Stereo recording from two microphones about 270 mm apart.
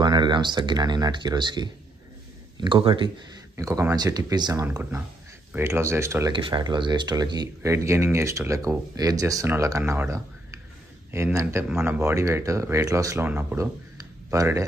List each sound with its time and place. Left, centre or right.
0.0 s speech: centre